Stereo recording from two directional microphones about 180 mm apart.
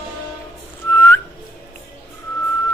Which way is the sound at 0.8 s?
10° left (ahead or behind).